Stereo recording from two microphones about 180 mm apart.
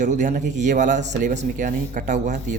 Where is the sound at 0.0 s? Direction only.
45° right (ahead or behind).